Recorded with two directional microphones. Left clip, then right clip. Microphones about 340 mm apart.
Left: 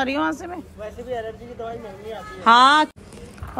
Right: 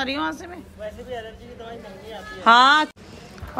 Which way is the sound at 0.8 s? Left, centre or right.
Centre.